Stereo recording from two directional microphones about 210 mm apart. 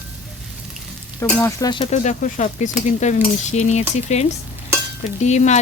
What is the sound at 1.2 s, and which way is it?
Frying, 15° left (ahead or behind).